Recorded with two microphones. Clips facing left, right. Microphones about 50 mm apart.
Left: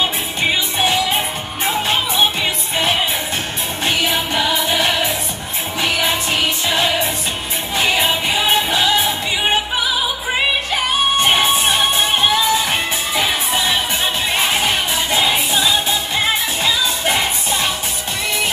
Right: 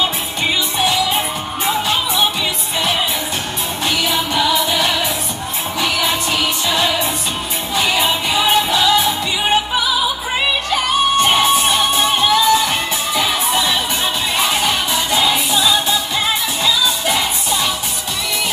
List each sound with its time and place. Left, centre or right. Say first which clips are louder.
0.0 s music: even; left
3.8 s music: even; left
11.2 s crowd: right 1 dB; centre
11.6 s music: right 1 dB; left
14.3 s music: right 1 dB; left